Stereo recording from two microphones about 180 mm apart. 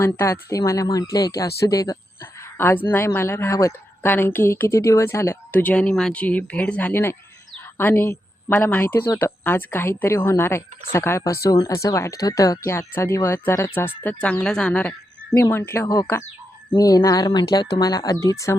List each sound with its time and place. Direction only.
0.0 s a woman's voice: 15° left (ahead or behind)